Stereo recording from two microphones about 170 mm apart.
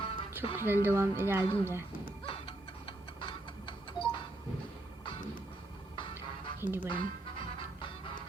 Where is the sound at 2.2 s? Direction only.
35° left (ahead or behind).